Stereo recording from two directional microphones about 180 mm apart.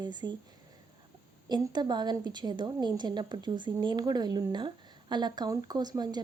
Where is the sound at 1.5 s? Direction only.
25° right (ahead or behind).